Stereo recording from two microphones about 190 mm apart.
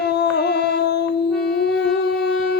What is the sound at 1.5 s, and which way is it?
Wind instrument, 60° left (ahead or behind).